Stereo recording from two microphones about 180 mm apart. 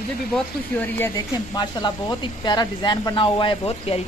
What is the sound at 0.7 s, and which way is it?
Speech, 10° left (ahead or behind).